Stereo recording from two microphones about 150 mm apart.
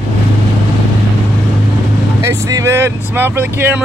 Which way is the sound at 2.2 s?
20° right (ahead or behind).